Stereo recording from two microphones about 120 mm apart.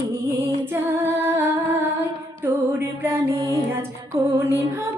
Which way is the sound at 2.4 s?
20° right (ahead or behind).